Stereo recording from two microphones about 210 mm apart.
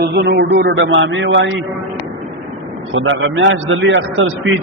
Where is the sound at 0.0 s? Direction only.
50° right (ahead or behind).